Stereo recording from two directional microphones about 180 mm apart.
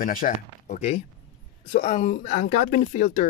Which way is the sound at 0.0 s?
50° left (ahead or behind).